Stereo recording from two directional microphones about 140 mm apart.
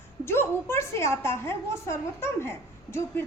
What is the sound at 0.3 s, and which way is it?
A woman's voice, 15° left (ahead or behind).